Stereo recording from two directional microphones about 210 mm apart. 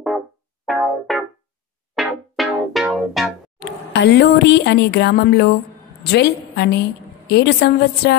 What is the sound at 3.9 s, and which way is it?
A woman's voice, 55° left (ahead or behind).